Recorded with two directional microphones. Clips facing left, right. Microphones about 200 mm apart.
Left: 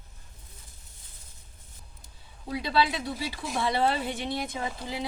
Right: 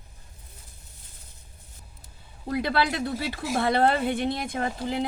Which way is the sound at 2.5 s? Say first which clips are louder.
Right 2 dB; 55° right (ahead or behind).